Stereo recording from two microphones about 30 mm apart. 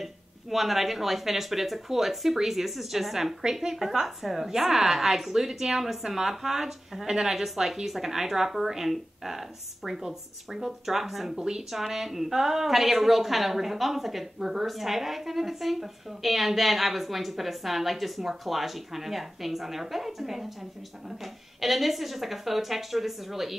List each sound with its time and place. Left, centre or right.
0.0 s a woman's voice: centre
11.3 s speech: right
11.7 s a woman's voice: centre